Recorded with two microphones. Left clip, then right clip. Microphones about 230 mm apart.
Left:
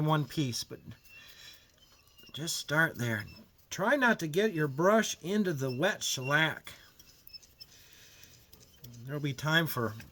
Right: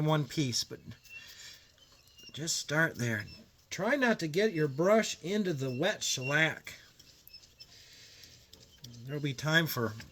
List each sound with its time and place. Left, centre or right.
0.0 s a sound: centre
2.3 s speech: centre
3.7 s speech: left
9.0 s speech: left